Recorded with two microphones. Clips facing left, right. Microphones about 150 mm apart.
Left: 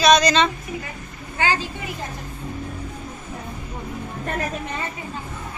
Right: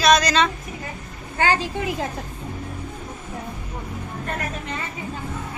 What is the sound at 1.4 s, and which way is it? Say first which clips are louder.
Speech: right 2 dB; 45° right (ahead or behind).